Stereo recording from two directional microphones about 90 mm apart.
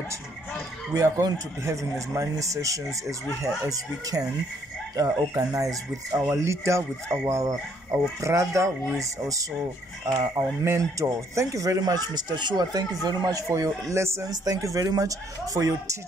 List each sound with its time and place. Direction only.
0.9 s speech: 35° right (ahead or behind)
14.3 s speech: 45° right (ahead or behind)